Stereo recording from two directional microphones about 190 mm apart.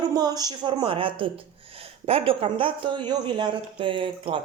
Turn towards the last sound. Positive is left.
turn(degrees=-25)  # may be behind; listen again after turning